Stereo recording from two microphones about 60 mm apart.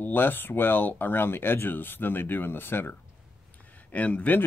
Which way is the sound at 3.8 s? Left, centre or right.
Left.